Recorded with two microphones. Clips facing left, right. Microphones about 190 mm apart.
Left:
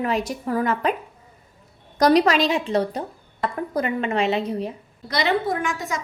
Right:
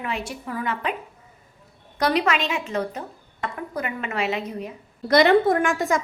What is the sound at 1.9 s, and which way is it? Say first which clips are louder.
A woman's voice: left 5 dB; 40° left (ahead or behind).